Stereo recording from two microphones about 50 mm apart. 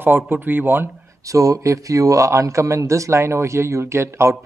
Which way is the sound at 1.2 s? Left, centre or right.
Right.